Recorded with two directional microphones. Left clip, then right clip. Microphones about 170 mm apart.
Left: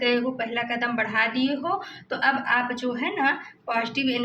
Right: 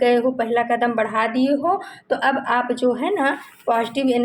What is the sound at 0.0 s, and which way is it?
A woman's voice, 45° right (ahead or behind).